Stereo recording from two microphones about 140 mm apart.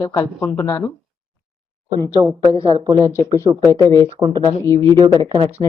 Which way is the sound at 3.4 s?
20° right (ahead or behind).